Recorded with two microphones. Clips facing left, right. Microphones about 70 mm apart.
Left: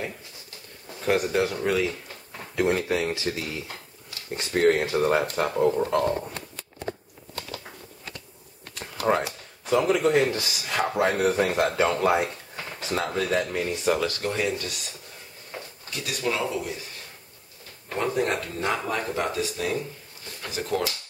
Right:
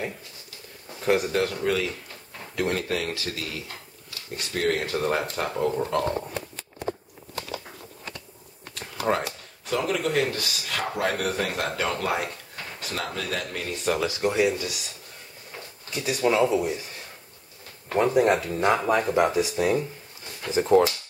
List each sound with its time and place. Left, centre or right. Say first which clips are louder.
1.0 s speech: even; centre; by 4.8 s left
4.8 s speech: left 3 dB; centre
8.7 s a sound: left 2 dB; centre
9.7 s speech: left 5 dB; centre
14.0 s speech: right 4 dB; centre
15.9 s speech: right 5 dB; centre
17.9 s speech: right 5 dB; centre